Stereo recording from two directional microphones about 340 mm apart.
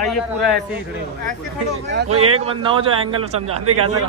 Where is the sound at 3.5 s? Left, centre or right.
Right.